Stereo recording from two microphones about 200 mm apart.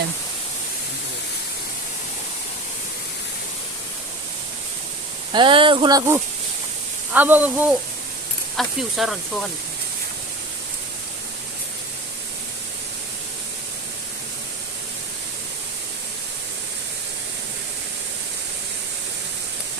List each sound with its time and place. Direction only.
5.3 s speech: 25° right (ahead or behind); by 9.1 s centre (ahead or behind)